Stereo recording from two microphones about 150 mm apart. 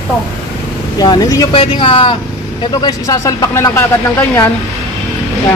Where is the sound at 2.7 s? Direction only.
25° left (ahead or behind).